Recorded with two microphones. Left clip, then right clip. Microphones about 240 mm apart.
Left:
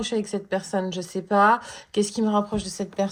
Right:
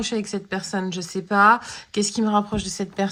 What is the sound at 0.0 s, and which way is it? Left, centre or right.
A woman's voice, right.